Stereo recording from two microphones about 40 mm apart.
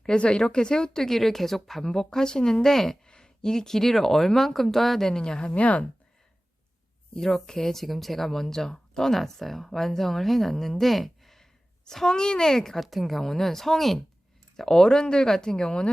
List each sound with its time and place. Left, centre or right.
0.2 s speech: left; by 3.0 s centre
3.1 s speech: centre
5.5 s speech: left
7.1 s speech: centre
12.8 s speech: centre; by 15.9 s left